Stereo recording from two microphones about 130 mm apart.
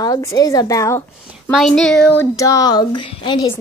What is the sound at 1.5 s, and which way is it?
Speech, centre (ahead or behind).